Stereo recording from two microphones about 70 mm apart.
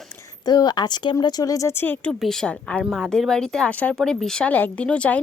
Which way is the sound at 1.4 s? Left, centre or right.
Left.